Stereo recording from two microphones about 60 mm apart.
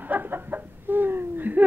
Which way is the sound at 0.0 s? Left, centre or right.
Right.